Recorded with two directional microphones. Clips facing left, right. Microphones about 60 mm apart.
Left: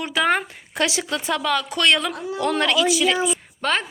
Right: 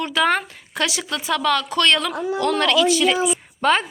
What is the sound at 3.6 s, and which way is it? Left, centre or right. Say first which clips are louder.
Speech: right 5 dB; centre.